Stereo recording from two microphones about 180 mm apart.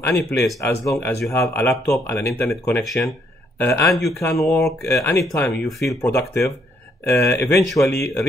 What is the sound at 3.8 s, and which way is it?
Speech, centre (ahead or behind).